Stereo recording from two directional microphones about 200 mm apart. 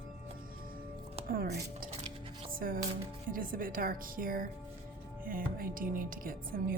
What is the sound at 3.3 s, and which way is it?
Speech, 45° right (ahead or behind).